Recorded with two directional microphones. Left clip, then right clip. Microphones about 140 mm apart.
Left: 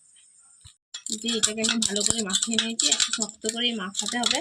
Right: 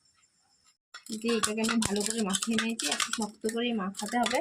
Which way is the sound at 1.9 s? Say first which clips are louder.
Left 5 dB; 25° right (ahead or behind).